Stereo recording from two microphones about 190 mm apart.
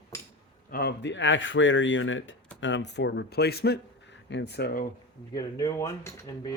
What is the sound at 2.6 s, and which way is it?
Speech, 70° left (ahead or behind).